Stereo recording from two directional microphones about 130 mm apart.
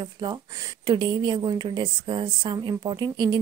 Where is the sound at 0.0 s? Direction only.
35° right (ahead or behind).